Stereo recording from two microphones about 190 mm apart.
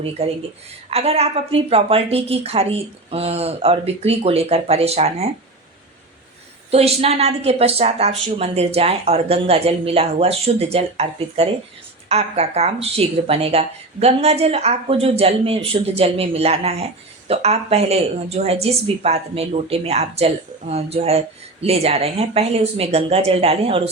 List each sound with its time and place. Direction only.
0.2 s a woman's voice: 35° right (ahead or behind)
6.7 s a woman's voice: 30° right (ahead or behind)